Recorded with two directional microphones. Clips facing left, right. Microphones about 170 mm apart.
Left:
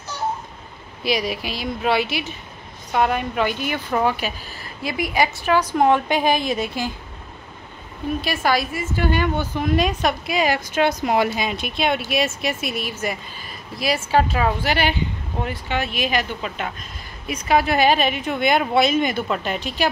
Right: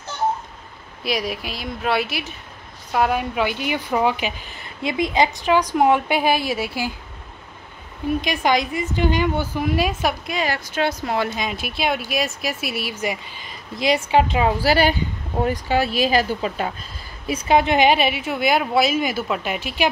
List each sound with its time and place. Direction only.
1.0 s a woman's voice: centre (ahead or behind)
8.2 s a woman's voice: 15° right (ahead or behind)
10.2 s speech: 10° left (ahead or behind); by 14.5 s 20° right (ahead or behind)
14.6 s speech: 35° right (ahead or behind)
17.5 s a woman's voice: 20° right (ahead or behind)